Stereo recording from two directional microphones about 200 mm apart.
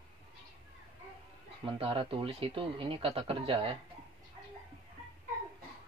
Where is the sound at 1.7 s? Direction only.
25° right (ahead or behind).